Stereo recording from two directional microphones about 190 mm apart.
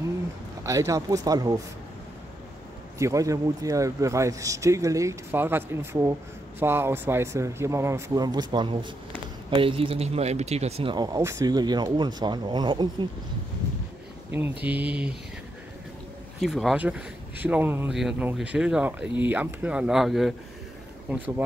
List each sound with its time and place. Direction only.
0.7 s speech: 15° right (ahead or behind)
3.0 s speech: 15° right (ahead or behind)
14.6 s speech: 10° right (ahead or behind)
16.3 s speech: centre (ahead or behind)